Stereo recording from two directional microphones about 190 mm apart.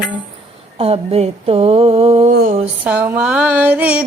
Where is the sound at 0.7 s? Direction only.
30° right (ahead or behind).